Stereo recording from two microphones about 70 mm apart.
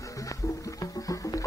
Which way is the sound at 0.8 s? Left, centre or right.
Left.